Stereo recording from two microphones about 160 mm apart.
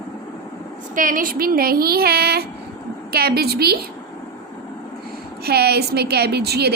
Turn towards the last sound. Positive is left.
turn(degrees=-90)